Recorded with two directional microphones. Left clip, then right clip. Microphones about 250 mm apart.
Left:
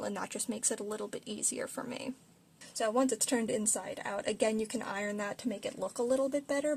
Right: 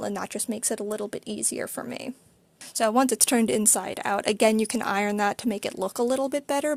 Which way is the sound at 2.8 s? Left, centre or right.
Right.